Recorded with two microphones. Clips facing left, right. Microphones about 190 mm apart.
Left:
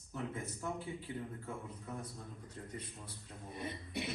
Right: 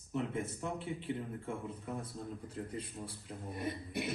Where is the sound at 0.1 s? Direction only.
25° right (ahead or behind).